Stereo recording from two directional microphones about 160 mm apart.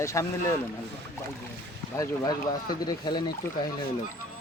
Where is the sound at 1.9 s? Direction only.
20° left (ahead or behind).